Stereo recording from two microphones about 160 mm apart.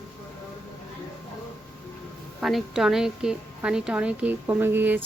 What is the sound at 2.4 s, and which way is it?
A woman's voice, centre (ahead or behind).